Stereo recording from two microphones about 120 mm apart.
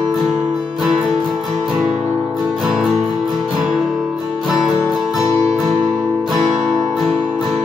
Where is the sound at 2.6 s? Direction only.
5° right (ahead or behind).